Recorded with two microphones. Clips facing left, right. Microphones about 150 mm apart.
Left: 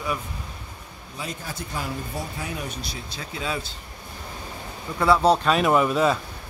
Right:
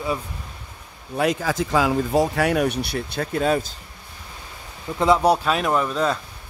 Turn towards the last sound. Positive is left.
turn(degrees=5)  # may be behind; listen again after turning